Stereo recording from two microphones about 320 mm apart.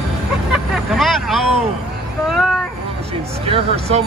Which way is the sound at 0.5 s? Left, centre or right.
Centre.